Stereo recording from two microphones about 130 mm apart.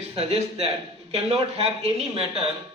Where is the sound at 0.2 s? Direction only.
50° right (ahead or behind).